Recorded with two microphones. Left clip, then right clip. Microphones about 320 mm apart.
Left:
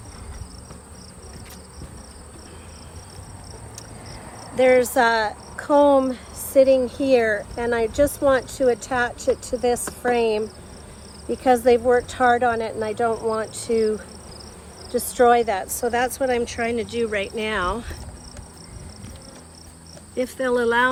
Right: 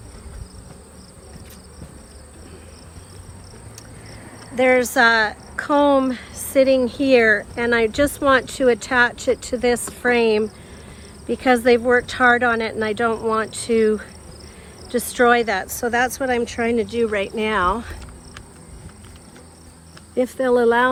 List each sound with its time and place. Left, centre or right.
4.5 s speech: right
20.1 s speech: centre